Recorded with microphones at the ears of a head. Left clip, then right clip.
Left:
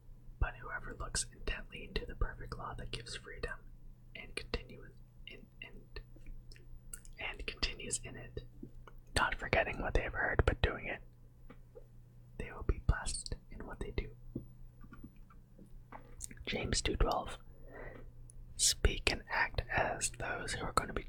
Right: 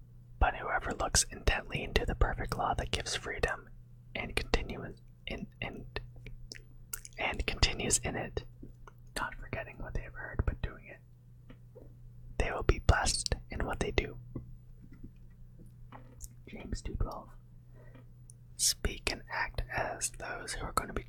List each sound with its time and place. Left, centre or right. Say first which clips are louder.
0.3 s speech: right 11 dB; right
4.1 s whispering: right 9 dB; right
9.3 s speech: left 9 dB; left
12.4 s speech: right 11 dB; right
16.3 s whispering: left 10 dB; left
19.1 s speech: left 1 dB; centre